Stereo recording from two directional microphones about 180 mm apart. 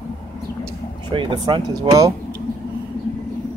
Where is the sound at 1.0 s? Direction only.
25° right (ahead or behind).